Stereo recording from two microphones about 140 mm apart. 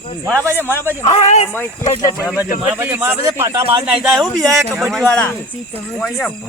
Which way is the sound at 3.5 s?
40° right (ahead or behind).